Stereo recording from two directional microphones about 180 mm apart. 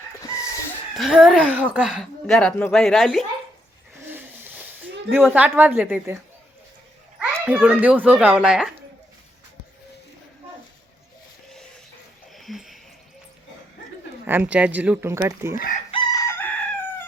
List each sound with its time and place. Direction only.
0.9 s speech: centre (ahead or behind)
5.1 s a child's voice: 10° right (ahead or behind)
7.2 s a child's voice: 10° right (ahead or behind)
12.3 s a sound: centre (ahead or behind)
14.3 s a child's voice: 10° right (ahead or behind)
15.5 s chicken: 50° left (ahead or behind)
15.9 s chicken: 25° left (ahead or behind)